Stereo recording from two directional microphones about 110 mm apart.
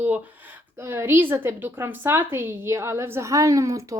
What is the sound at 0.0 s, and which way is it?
Speech, 15° right (ahead or behind).